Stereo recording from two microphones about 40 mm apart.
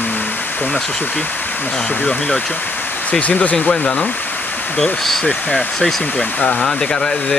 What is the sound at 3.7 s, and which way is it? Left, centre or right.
Speech, left.